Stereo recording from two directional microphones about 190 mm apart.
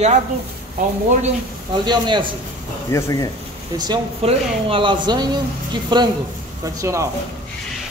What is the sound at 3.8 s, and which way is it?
Speech, 25° right (ahead or behind).